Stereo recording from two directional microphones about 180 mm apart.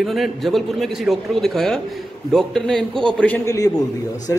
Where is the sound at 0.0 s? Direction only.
Centre (ahead or behind).